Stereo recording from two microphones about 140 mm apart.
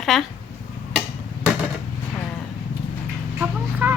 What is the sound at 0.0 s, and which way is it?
Speech, centre (ahead or behind).